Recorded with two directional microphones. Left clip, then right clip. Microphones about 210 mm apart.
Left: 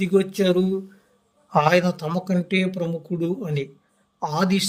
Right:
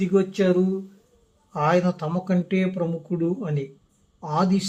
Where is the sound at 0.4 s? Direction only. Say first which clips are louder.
Right 1 dB; centre (ahead or behind).